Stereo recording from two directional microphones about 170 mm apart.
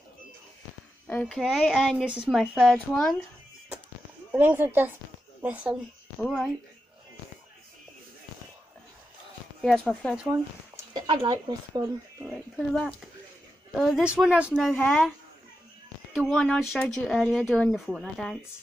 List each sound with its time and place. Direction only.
1.0 s speech: 5° left (ahead or behind)
4.3 s speech: 10° right (ahead or behind)
9.6 s speech: centre (ahead or behind)
10.9 s a sound: 25° right (ahead or behind)
12.3 s speech: 5° left (ahead or behind)
16.2 s speech: 5° left (ahead or behind)